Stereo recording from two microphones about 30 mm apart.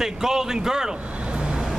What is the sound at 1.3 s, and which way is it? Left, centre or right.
Vehicle, right.